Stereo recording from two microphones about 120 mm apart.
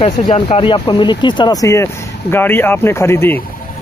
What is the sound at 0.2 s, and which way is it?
Speech, 60° left (ahead or behind).